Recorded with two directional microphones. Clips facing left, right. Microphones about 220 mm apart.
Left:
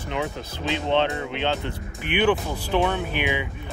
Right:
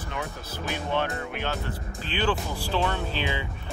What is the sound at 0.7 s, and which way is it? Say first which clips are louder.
Speech: left 6 dB; 20° left (ahead or behind).